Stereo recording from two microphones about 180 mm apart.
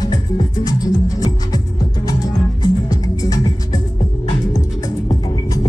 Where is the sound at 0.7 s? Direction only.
20° left (ahead or behind).